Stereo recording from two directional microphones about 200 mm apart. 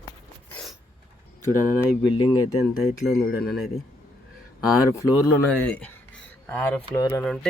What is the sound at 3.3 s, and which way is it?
Speech, 50° left (ahead or behind).